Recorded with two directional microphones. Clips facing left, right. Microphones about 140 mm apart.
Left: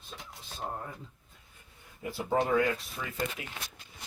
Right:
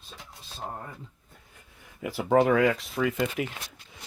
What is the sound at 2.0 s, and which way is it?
Speech, 80° right.